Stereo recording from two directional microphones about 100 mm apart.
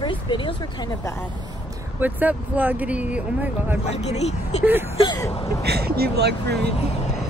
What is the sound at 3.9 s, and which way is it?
Speech, 90° left.